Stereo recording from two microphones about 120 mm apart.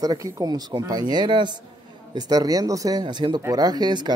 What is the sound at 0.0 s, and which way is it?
Speech, 30° right (ahead or behind).